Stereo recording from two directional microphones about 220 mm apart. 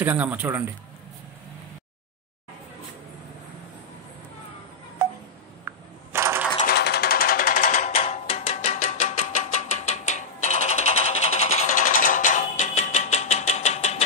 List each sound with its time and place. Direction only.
0.0 s speech: 10° right (ahead or behind)
5.7 s a sound: 10° right (ahead or behind)
6.6 s music: 45° left (ahead or behind); by 14.0 s 30° left (ahead or behind)